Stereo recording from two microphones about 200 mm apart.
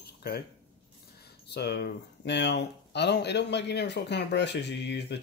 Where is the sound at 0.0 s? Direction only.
50° left (ahead or behind).